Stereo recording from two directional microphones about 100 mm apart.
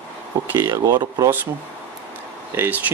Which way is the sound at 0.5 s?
30° right (ahead or behind).